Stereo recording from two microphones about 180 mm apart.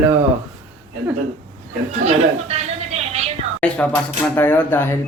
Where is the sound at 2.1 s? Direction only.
35° right (ahead or behind).